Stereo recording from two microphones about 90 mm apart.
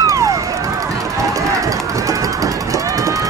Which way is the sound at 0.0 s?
35° right (ahead or behind).